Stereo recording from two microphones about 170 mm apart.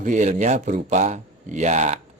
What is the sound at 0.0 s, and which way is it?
Speech, 45° right (ahead or behind).